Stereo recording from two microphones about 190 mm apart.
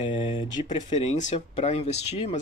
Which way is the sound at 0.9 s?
35° left (ahead or behind).